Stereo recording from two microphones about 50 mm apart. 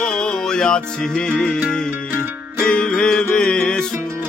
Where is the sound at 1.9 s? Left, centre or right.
Right.